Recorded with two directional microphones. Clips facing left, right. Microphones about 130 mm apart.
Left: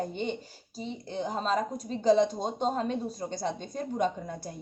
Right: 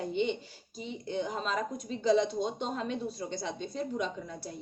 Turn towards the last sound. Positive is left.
turn(degrees=50)  # may be behind; listen again after turning